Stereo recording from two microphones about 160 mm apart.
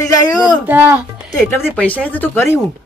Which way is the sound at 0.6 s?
15° right (ahead or behind).